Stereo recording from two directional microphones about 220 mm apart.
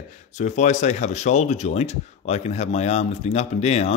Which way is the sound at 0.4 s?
35° left (ahead or behind).